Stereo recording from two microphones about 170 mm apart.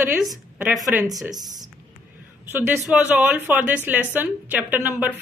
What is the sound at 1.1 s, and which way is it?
A woman's voice, 20° right (ahead or behind).